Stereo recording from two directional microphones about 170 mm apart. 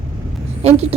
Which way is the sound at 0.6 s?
40° right (ahead or behind).